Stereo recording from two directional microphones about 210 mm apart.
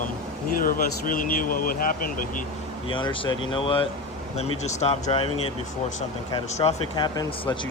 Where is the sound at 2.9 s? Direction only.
25° left (ahead or behind).